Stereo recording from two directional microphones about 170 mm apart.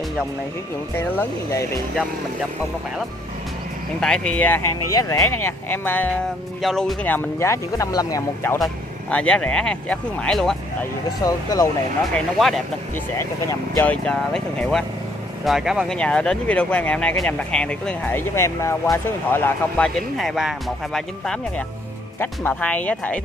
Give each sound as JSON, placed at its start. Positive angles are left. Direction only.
{"t": 0.9, "sound": "speech", "side_deg": 15}
{"t": 4.0, "sound": "speech", "side_deg": 5}
{"t": 6.6, "sound": "speech", "side_deg": 0}
{"t": 9.1, "sound": "speech", "side_deg": 5}
{"t": 11.1, "sound": "speech", "side_deg": 20}
{"t": 12.1, "sound": "speech", "side_deg": 0}
{"t": 13.2, "sound": "speech", "side_deg": 15}
{"t": 14.0, "sound": "speech", "side_deg": 5}
{"t": 20.2, "sound": "speech", "side_deg": 0}